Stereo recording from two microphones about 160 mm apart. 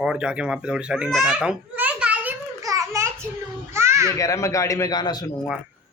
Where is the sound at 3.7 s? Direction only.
15° right (ahead or behind).